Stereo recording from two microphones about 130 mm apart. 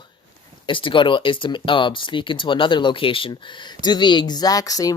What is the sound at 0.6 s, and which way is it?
Speech, 40° left (ahead or behind).